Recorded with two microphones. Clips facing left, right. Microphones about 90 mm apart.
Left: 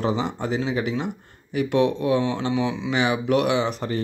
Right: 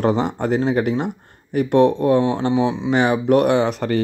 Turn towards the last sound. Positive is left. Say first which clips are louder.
# right 5 dB
turn(degrees=-65)  # may be behind; listen again after turning